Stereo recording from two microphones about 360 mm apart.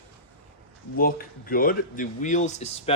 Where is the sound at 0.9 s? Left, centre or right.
Left.